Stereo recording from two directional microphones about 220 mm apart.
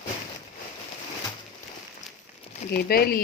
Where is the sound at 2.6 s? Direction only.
45° left (ahead or behind).